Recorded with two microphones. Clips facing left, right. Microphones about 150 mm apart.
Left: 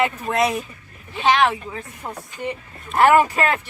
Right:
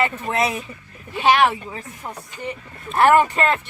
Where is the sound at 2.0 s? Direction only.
15° left (ahead or behind).